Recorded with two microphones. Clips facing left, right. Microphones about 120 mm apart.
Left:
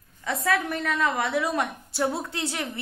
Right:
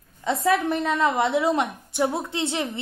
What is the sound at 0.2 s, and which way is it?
A woman's voice, 25° right (ahead or behind).